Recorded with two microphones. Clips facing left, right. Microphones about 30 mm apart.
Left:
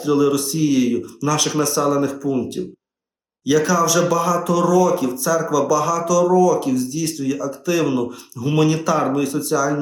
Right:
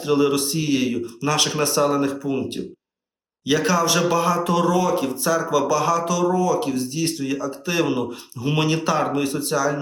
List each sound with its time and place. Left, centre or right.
0.0 s speech: right